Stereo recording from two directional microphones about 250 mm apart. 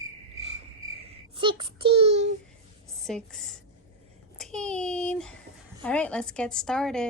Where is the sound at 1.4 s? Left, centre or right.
Centre.